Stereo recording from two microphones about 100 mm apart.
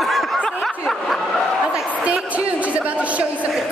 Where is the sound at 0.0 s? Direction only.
Centre (ahead or behind).